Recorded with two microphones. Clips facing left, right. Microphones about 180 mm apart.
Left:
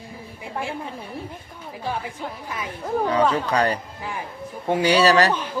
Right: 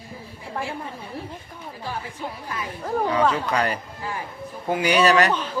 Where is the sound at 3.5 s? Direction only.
35° left (ahead or behind).